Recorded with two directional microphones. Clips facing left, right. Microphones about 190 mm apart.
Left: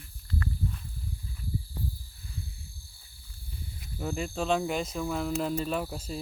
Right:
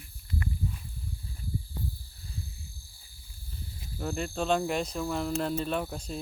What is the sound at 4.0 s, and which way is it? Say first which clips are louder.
Speech: even; 5° left (ahead or behind).